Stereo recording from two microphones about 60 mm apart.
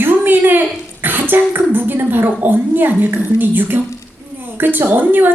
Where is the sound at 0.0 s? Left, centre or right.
Right.